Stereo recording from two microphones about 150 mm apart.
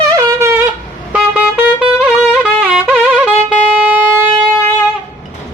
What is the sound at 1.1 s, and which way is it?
Music, 10° right (ahead or behind).